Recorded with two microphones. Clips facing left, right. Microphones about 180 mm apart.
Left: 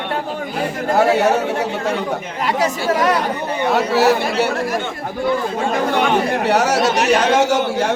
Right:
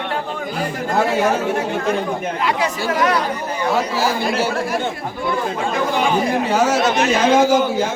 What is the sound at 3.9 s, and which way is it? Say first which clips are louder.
Speech: left 5 dB; 70° left (ahead or behind).